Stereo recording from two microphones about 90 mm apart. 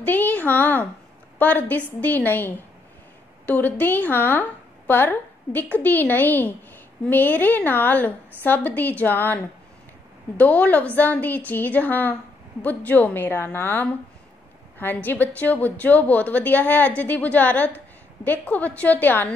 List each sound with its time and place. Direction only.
0.0 s a woman's voice: 20° left (ahead or behind)
15.0 s speech: 20° left (ahead or behind)